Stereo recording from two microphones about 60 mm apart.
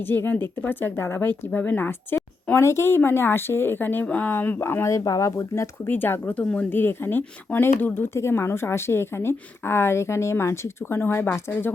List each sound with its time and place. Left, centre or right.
0.0 s speech: left
4.6 s a woman's voice: left
4.9 s speech: left
5.4 s a woman's voice: left
5.9 s speech: left
6.7 s speech: left
8.1 s a woman's voice: left